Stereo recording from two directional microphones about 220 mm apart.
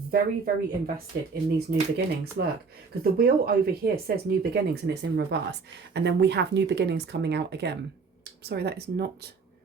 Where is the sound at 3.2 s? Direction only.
45° right (ahead or behind).